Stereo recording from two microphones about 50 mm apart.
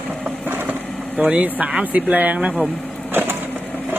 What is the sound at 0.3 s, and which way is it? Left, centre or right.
Vehicle, right.